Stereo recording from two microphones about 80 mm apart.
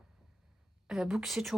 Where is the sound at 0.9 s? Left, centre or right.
Centre.